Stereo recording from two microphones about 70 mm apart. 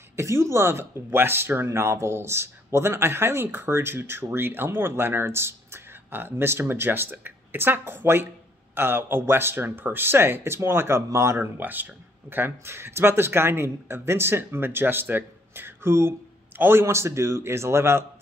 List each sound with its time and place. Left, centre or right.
0.1 s speech: right
11.6 s speech: right